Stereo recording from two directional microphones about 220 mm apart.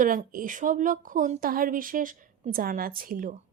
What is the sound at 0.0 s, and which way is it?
Speech, 40° right (ahead or behind).